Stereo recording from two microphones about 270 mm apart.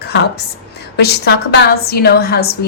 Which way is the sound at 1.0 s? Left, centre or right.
Left.